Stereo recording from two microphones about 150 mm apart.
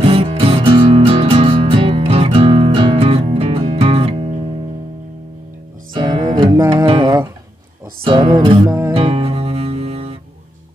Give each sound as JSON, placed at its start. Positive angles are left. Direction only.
{"t": 0.0, "sound": "music", "side_deg": -40}
{"t": 5.9, "sound": "music", "side_deg": -30}
{"t": 6.9, "sound": "a sound", "side_deg": -30}
{"t": 8.0, "sound": "music", "side_deg": -40}
{"t": 8.6, "sound": "music", "side_deg": -20}
{"t": 8.9, "sound": "music", "side_deg": -40}